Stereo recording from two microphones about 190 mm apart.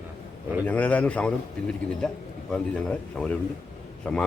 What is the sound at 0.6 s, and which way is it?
A man's voice, 5° left (ahead or behind).